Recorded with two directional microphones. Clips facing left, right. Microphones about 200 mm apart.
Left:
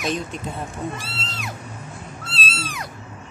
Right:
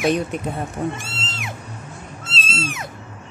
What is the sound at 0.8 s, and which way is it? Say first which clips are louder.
Speech: right 5 dB; 45° right (ahead or behind).